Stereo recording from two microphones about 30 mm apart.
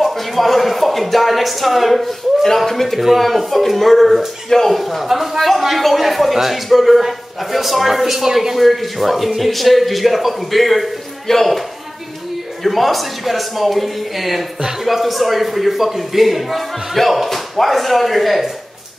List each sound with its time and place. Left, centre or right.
0.0 s a man's voice: centre
5.0 s a man's voice: centre
8.5 s a man's voice: centre
12.6 s a man's voice: centre
14.6 s speech: centre
14.9 s a man's voice: centre